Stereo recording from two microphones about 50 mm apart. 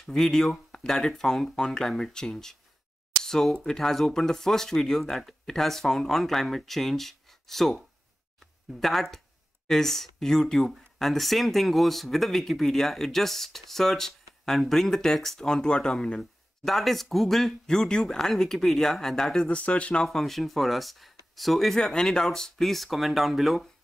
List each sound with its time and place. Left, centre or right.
0.0 s speech: centre
8.7 s speech: centre
16.6 s speech: centre
19.4 s speech: left
20.1 s speech: centre
21.7 s speech: centre